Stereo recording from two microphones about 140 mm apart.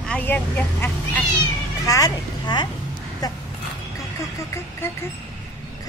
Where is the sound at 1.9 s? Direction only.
30° left (ahead or behind).